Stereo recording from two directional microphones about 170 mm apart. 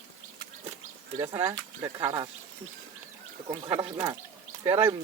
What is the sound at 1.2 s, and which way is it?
Speech, 20° right (ahead or behind).